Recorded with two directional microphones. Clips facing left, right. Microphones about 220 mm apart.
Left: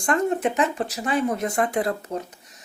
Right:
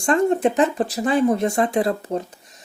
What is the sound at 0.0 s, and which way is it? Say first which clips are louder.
Speech: right 4 dB; 30° right (ahead or behind).